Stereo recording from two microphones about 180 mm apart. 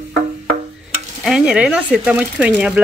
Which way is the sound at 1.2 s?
5° right (ahead or behind).